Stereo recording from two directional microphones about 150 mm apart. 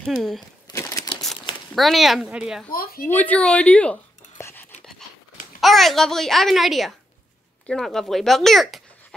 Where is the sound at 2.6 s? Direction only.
75° left (ahead or behind).